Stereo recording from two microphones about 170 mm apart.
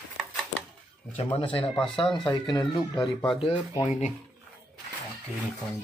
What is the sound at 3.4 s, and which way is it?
Speech, 35° left (ahead or behind).